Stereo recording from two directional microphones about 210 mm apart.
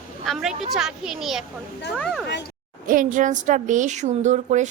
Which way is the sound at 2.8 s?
40° right (ahead or behind).